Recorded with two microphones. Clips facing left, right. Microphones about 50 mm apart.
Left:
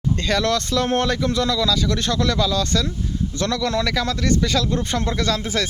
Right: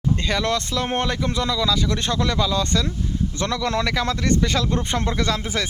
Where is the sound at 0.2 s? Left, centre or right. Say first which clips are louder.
Left 2 dB; centre.